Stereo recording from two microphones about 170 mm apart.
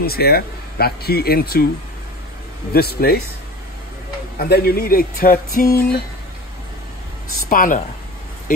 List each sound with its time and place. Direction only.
0.0 s speech: 65° left (ahead or behind)
2.7 s speech: 65° left (ahead or behind)
4.4 s speech: 65° left (ahead or behind)
7.4 s a woman's voice: 55° left (ahead or behind)